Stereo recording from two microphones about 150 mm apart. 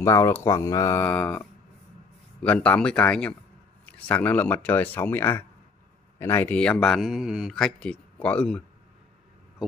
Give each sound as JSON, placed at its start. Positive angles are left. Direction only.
{"t": 0.0, "sound": "speech", "side_deg": 20}